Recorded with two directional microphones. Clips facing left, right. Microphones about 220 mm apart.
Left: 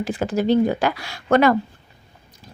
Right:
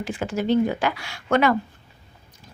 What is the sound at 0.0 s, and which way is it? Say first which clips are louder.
A woman's voice: left 4 dB; 35° left (ahead or behind).